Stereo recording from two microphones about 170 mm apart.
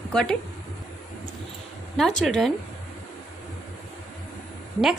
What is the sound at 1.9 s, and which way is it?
Speech, 5° left (ahead or behind).